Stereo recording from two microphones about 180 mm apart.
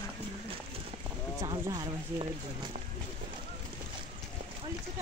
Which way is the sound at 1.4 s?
20° right (ahead or behind).